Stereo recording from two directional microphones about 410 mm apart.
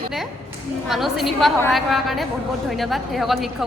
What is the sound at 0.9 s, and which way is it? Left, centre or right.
A woman's voice, centre.